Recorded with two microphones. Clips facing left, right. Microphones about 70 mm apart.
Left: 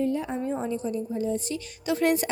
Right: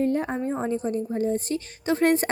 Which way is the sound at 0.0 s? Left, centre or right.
Right.